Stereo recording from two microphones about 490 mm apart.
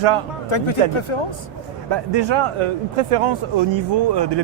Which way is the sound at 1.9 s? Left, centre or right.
Right.